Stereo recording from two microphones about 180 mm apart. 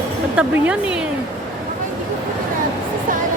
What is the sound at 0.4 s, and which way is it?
Speech, 5° right (ahead or behind).